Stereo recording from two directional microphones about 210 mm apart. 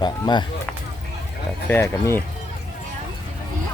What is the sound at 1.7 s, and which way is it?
Speech, 10° left (ahead or behind).